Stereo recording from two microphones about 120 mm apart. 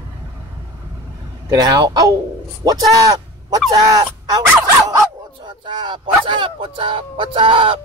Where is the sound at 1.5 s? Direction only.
35° right (ahead or behind).